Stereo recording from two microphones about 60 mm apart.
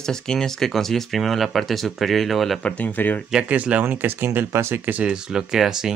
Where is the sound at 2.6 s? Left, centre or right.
Left.